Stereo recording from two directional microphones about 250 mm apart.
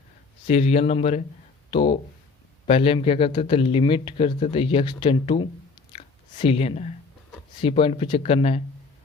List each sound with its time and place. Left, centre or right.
0.4 s speech: left